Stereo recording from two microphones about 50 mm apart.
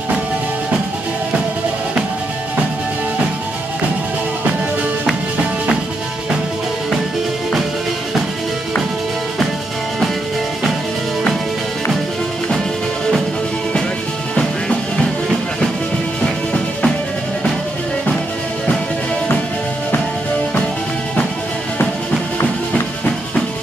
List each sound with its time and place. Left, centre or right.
16.2 s music: centre